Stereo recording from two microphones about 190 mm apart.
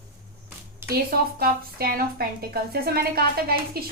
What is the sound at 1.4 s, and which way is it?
A woman's voice, 50° right (ahead or behind).